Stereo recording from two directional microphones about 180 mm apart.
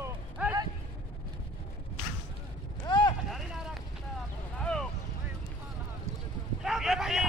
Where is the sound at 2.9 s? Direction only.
25° left (ahead or behind).